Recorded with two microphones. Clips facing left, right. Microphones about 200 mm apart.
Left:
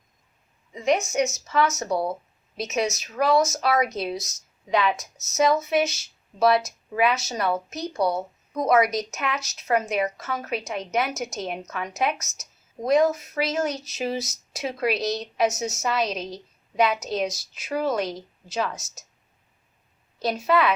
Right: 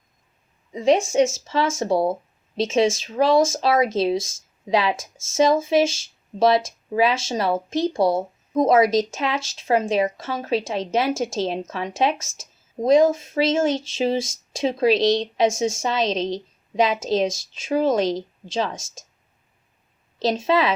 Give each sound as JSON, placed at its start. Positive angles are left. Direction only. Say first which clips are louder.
{"t": 0.7, "sound": "speech", "louder": "right 5 dB", "side_deg": -30}
{"t": 18.8, "sound": "a woman's voice", "louder": "right 5 dB", "side_deg": -90}
{"t": 20.2, "sound": "speech", "louder": "right 2 dB", "side_deg": -25}